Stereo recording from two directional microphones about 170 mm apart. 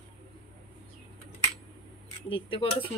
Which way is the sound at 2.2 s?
30° left (ahead or behind).